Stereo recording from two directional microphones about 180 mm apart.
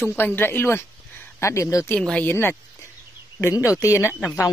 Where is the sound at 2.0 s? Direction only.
5° left (ahead or behind).